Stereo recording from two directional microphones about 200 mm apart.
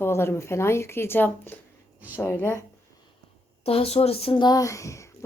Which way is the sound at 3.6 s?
30° left (ahead or behind).